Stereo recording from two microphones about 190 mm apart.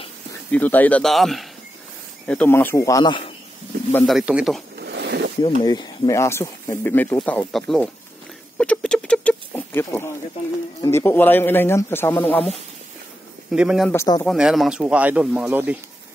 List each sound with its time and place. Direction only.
0.5 s speech: 10° left (ahead or behind); by 3.3 s 25° left (ahead or behind)
3.9 s speech: centre (ahead or behind)
4.7 s a sound: 60° right (ahead or behind)
5.6 s speech: 20° left (ahead or behind); by 7.9 s 5° left (ahead or behind)
8.5 s rodents: 5° left (ahead or behind)
10.8 s speech: 15° left (ahead or behind)
13.5 s speech: 5° right (ahead or behind)
13.8 s speech: 15° left (ahead or behind)
14.2 s speech: centre (ahead or behind)